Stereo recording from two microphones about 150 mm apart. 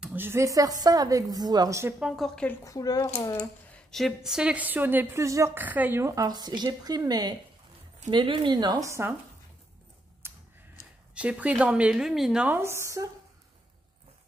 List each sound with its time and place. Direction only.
0.0 s a woman's voice: 15° right (ahead or behind)
2.0 s a woman's voice: centre (ahead or behind)
2.6 s speech: 25° left (ahead or behind)
3.7 s a woman's voice: centre (ahead or behind); by 9.1 s 20° right (ahead or behind)
10.2 s tick-tock: 15° right (ahead or behind)
11.1 s a woman's voice: 10° right (ahead or behind)